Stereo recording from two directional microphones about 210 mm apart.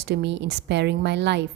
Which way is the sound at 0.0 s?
55° right (ahead or behind).